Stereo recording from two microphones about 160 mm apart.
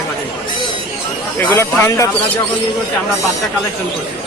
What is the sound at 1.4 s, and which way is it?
Speech, 15° left (ahead or behind).